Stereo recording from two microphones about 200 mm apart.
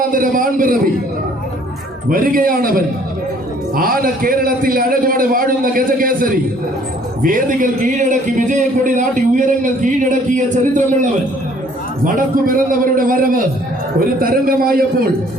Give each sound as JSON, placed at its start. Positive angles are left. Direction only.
{"t": 0.1, "sound": "a man's voice", "side_deg": -45}
{"t": 2.0, "sound": "a man's voice", "side_deg": -45}